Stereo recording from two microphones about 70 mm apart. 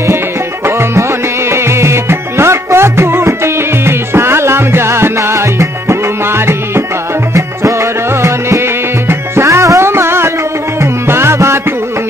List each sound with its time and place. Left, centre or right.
0.7 s music: right